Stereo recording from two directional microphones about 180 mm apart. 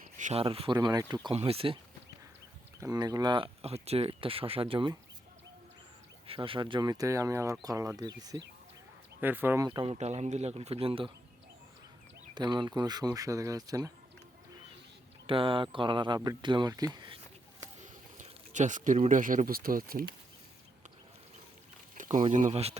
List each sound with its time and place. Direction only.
0.2 s speech: 35° right (ahead or behind)
2.8 s speech: 20° right (ahead or behind)
6.2 s speech: 30° right (ahead or behind)
9.2 s speech: 10° right (ahead or behind)
9.6 s speech: 30° right (ahead or behind)
12.3 s speech: 25° right (ahead or behind)
15.3 s speech: 30° right (ahead or behind)
17.7 s speech: 40° right (ahead or behind)
22.3 s speech: 40° right (ahead or behind)